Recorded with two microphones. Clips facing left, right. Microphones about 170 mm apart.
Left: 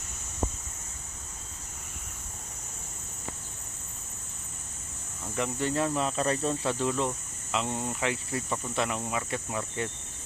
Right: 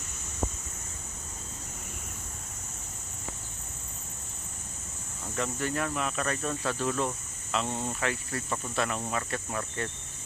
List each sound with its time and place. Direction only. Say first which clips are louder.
5.4 s speech: left 3 dB; 25° left (ahead or behind)